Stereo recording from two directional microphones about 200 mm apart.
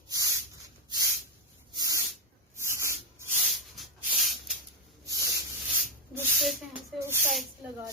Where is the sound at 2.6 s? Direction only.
15° right (ahead or behind).